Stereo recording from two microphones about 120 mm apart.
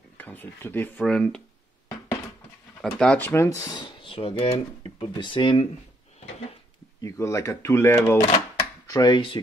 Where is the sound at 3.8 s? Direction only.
45° left (ahead or behind).